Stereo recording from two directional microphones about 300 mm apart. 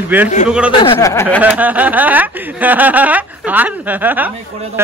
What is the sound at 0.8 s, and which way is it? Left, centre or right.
Speech, centre.